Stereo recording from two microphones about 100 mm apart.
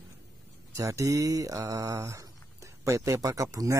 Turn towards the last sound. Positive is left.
turn(degrees=-35)  # may be behind; listen again after turning